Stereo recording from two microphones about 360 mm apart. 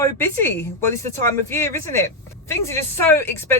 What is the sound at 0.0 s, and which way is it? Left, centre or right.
Speech, centre.